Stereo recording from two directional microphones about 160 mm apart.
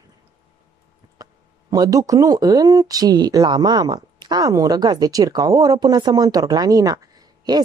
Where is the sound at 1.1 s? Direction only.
25° right (ahead or behind).